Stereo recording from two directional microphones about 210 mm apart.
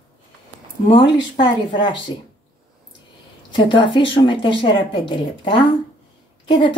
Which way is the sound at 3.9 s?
25° left (ahead or behind).